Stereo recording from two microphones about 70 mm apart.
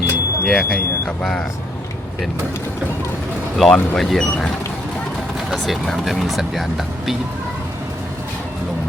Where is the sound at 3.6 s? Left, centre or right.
Centre.